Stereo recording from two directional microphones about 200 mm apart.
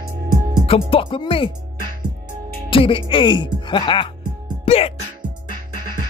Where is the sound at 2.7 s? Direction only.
25° left (ahead or behind).